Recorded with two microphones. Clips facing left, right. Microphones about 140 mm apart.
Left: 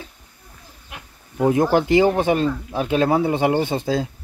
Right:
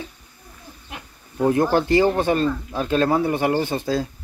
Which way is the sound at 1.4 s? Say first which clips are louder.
Left 1 dB; 15° left (ahead or behind).